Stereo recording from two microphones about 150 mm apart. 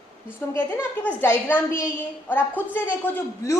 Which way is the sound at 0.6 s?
15° left (ahead or behind).